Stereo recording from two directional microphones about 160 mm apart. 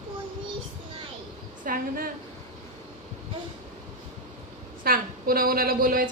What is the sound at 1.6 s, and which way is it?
Speech, 60° right (ahead or behind).